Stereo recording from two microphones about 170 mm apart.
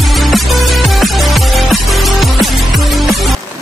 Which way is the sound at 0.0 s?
Centre (ahead or behind).